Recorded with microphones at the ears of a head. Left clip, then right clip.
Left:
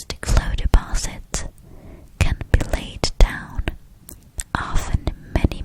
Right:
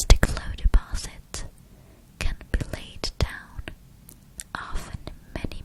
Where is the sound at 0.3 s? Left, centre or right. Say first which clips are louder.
Left 9 dB; left.